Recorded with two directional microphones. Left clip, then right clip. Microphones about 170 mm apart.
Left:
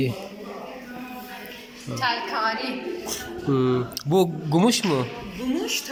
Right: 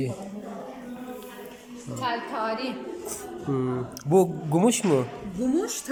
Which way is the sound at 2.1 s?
70° right (ahead or behind).